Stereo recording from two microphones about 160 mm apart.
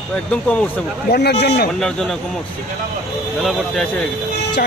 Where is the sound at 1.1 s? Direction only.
90° left.